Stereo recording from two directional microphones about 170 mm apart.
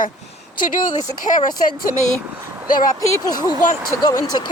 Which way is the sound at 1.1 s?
50° left (ahead or behind).